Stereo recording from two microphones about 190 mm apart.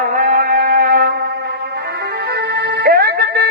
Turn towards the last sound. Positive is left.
turn(degrees=-55)  # may be behind; listen again after turning